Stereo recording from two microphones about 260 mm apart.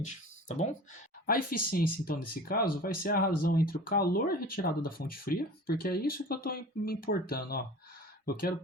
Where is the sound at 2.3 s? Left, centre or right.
Left.